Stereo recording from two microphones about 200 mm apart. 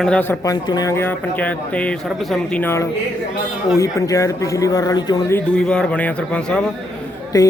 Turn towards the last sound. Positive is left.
turn(degrees=20)  # may be behind; listen again after turning